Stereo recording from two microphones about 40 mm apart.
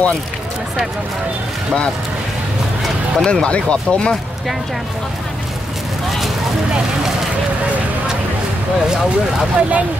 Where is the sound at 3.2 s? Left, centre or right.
Left.